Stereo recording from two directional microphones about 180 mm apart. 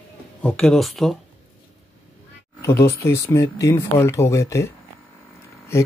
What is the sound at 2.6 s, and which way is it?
Speech, 15° left (ahead or behind).